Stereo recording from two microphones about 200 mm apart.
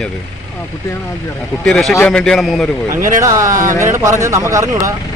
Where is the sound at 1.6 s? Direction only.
5° left (ahead or behind).